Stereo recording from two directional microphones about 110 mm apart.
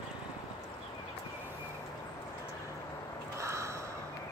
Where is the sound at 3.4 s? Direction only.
25° right (ahead or behind).